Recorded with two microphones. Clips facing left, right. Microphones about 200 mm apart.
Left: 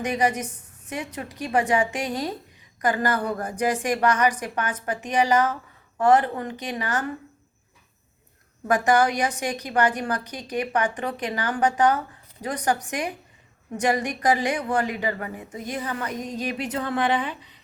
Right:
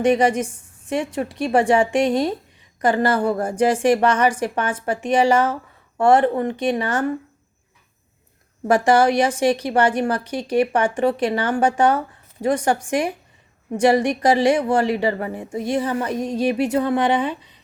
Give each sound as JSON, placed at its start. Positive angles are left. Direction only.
{"t": 0.0, "sound": "a woman's voice", "side_deg": -30}
{"t": 8.6, "sound": "a woman's voice", "side_deg": -25}